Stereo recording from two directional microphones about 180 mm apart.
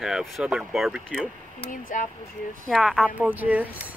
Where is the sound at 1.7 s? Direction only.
45° left (ahead or behind).